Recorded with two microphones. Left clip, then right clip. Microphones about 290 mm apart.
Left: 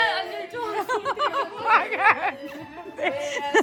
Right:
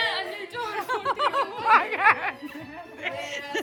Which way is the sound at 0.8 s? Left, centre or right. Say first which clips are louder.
Left 1 dB; centre.